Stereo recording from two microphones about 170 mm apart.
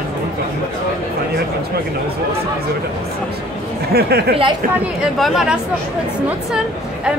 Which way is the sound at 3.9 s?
70° right (ahead or behind).